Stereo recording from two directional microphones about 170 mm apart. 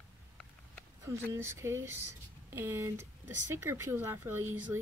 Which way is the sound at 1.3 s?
15° right (ahead or behind).